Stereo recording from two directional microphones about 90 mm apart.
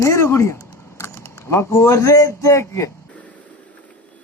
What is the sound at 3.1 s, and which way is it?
Vehicle, 15° left (ahead or behind).